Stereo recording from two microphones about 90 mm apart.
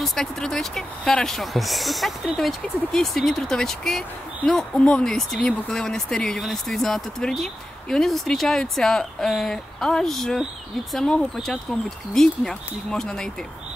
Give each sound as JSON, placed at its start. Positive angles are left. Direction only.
{"t": 0.0, "sound": "speech", "side_deg": 5}